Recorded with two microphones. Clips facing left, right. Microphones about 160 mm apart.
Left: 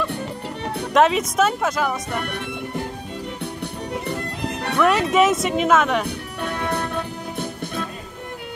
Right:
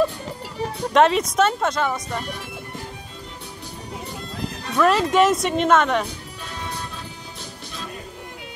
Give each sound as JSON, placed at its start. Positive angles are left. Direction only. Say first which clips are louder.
{"t": 0.9, "sound": "speech", "louder": "even", "side_deg": 0}
{"t": 2.1, "sound": "speech", "louder": "left 3 dB", "side_deg": 65}
{"t": 3.9, "sound": "music", "louder": "left 5 dB", "side_deg": 65}
{"t": 4.7, "sound": "speech", "louder": "even", "side_deg": 0}
{"t": 6.0, "sound": "music", "louder": "left 8 dB", "side_deg": 60}